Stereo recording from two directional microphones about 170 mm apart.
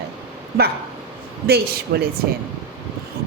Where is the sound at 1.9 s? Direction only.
65° right (ahead or behind).